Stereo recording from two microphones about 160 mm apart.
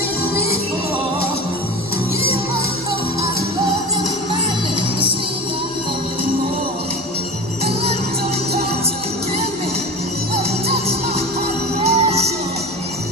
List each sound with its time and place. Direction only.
10.3 s music: 40° right (ahead or behind)